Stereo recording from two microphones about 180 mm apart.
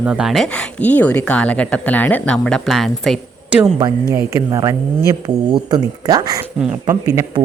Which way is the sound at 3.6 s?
25° right (ahead or behind).